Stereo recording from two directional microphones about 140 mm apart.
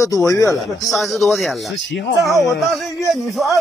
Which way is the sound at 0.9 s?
Centre (ahead or behind).